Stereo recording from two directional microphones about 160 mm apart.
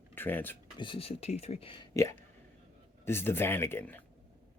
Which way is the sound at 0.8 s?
30° left (ahead or behind).